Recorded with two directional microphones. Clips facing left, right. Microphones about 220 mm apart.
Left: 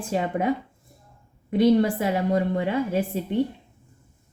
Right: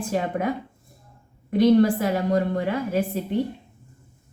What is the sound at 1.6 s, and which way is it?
A woman's voice, 25° left (ahead or behind).